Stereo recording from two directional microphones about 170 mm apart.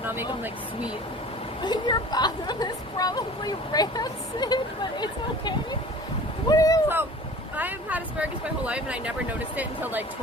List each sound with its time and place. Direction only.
0.0 s a sound: 10° right (ahead or behind)
1.6 s a woman's voice: 25° left (ahead or behind)
6.5 s a woman's voice: 20° left (ahead or behind)
7.5 s speech: 10° right (ahead or behind)